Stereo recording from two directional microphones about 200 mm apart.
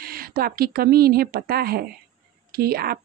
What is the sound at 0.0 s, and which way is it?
A woman's voice, 45° right (ahead or behind).